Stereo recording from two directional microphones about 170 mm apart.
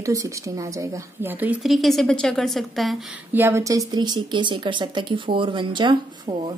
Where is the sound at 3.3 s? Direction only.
15° right (ahead or behind).